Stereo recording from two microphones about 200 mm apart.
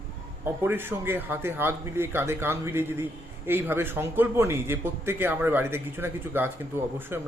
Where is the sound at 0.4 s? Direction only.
10° right (ahead or behind).